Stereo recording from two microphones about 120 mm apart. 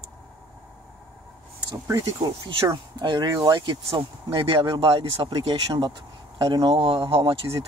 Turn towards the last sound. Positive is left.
turn(degrees=-25)  # may be behind; listen again after turning